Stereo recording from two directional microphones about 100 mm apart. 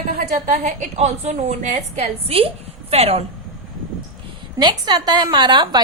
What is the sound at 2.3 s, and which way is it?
Speech, 75° right (ahead or behind).